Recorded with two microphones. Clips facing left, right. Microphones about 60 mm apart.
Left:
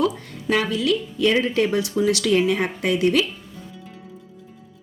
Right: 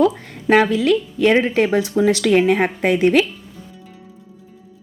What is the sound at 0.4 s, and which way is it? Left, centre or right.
Speech, right.